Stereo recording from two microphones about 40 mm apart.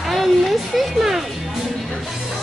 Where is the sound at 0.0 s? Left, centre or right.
Centre.